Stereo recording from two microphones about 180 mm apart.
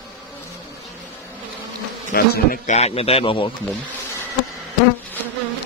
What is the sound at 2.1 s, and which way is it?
Speech, 55° left (ahead or behind).